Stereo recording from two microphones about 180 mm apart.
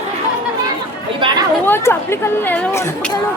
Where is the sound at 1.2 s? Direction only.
25° right (ahead or behind).